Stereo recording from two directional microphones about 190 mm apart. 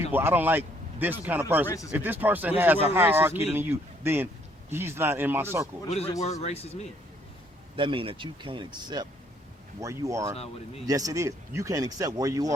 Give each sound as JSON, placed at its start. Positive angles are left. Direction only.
{"t": 0.1, "sound": "speech", "side_deg": -10}
{"t": 1.6, "sound": "speech", "side_deg": 15}
{"t": 1.9, "sound": "speech", "side_deg": -10}
{"t": 6.4, "sound": "speech", "side_deg": 35}
{"t": 7.8, "sound": "speech", "side_deg": -25}